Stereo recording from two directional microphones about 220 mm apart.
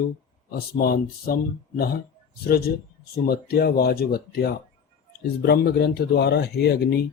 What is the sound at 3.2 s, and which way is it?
Speech, 45° left (ahead or behind).